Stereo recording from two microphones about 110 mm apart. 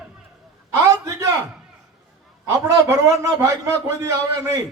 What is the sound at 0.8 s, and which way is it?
Speech, 30° right (ahead or behind).